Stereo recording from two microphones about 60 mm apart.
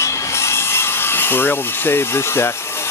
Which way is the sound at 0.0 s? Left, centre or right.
Left.